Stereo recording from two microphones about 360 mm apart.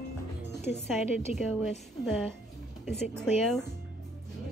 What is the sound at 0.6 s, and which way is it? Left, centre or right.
A woman's voice, centre.